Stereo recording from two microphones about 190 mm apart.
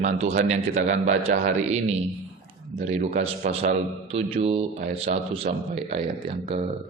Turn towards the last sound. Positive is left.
turn(degrees=-25)  # may be behind; listen again after turning